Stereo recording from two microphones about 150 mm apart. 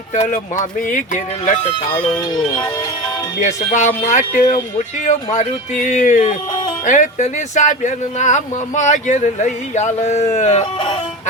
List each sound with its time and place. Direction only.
0.1 s speech: 60° left (ahead or behind)
2.1 s speech: 30° left (ahead or behind)
3.4 s speech: 55° left (ahead or behind)
6.5 s music: 35° left (ahead or behind)
6.8 s speech: 55° left (ahead or behind)
10.8 s music: 35° left (ahead or behind)